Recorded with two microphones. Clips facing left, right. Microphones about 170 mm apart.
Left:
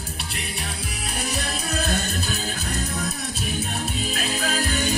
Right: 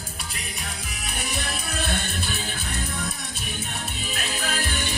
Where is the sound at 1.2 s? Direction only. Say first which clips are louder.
Left 3 dB; 35° left (ahead or behind).